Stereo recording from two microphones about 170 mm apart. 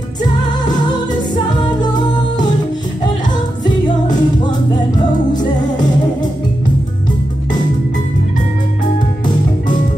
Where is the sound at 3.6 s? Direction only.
25° left (ahead or behind).